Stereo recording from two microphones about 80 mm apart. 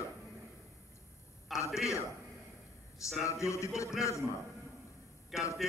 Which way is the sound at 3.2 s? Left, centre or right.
Left.